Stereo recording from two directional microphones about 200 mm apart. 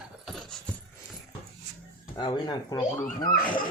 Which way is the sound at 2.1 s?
20° left (ahead or behind).